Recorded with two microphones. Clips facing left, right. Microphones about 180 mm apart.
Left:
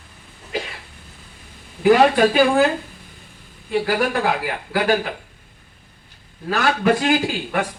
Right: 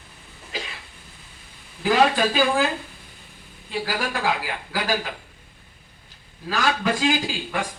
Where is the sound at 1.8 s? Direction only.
60° left (ahead or behind).